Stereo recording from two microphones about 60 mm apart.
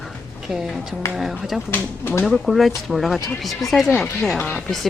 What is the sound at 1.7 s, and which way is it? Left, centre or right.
Speech, left.